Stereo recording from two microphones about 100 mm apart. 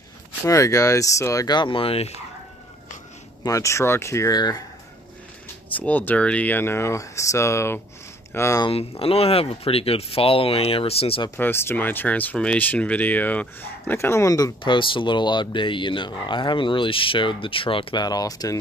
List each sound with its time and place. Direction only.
0.5 s speech: 35° left (ahead or behind)
1.5 s speech: 55° left (ahead or behind); by 2.1 s 80° left
3.4 s speech: 30° left (ahead or behind)
4.4 s speech: 45° left (ahead or behind)
5.8 s speech: 15° left (ahead or behind)
9.0 s speech: 80° left
11.3 s speech: 20° left (ahead or behind)
14.6 s speech: 55° left (ahead or behind)
18.0 s speech: 40° left (ahead or behind)